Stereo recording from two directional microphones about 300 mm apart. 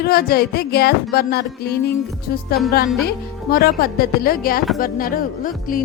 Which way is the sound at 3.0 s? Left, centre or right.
Left.